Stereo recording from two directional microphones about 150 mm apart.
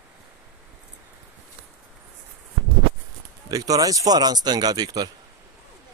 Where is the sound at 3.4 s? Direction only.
25° right (ahead or behind).